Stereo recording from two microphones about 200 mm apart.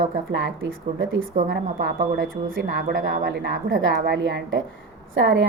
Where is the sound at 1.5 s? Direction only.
45° right (ahead or behind); by 5.4 s 65° right (ahead or behind).